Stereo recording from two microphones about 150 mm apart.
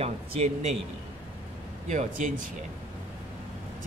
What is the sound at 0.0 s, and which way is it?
Speech, 45° right (ahead or behind).